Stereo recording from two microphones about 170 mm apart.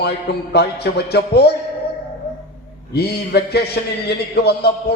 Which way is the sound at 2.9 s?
70° left (ahead or behind).